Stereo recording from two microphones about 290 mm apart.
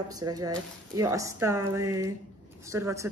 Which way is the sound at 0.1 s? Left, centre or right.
Centre.